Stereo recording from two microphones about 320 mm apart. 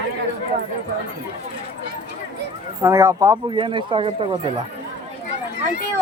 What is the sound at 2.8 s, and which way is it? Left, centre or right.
Speech, centre.